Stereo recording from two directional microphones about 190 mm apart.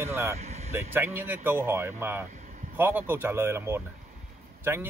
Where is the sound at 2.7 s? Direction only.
10° right (ahead or behind).